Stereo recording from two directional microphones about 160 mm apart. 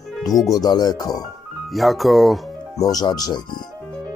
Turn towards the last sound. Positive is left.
turn(degrees=25)  # may be behind; listen again after turning